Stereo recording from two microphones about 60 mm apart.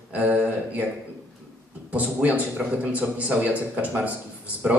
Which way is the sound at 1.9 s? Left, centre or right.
Right.